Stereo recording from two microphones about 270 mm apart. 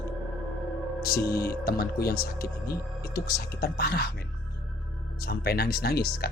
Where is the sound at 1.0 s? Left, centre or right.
Left.